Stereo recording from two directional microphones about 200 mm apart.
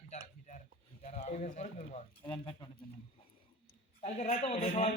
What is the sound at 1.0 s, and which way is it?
Speech, 35° left (ahead or behind).